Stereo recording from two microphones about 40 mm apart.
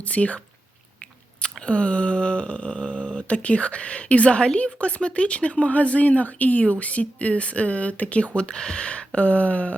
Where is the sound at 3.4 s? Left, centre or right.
Left.